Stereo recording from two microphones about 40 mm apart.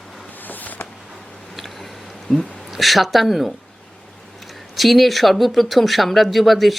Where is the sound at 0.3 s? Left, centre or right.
Left.